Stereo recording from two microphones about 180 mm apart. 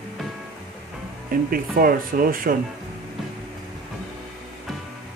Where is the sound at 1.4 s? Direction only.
50° right (ahead or behind).